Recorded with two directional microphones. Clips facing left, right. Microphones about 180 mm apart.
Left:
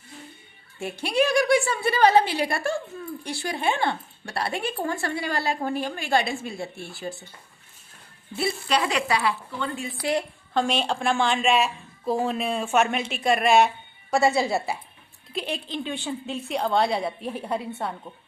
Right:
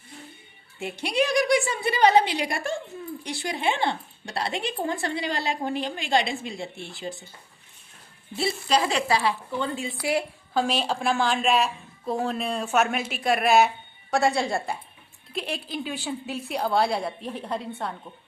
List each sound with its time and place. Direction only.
1.0 s a woman's voice: 15° right (ahead or behind)
8.4 s speech: 30° right (ahead or behind)
10.0 s a woman's voice: 10° right (ahead or behind)